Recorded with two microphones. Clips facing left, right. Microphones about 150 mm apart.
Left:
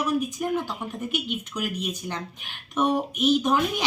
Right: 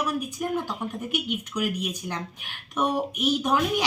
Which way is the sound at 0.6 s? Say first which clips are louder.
Even; 10° right (ahead or behind).